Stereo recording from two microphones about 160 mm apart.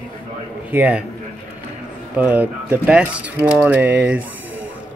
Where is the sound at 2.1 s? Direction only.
10° right (ahead or behind).